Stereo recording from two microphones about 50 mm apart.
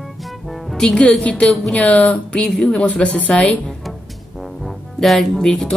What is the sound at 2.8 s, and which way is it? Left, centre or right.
Speech, left.